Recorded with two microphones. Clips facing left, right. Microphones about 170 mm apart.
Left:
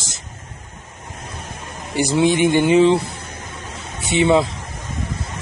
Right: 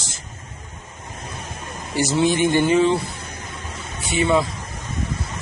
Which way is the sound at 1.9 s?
15° left (ahead or behind).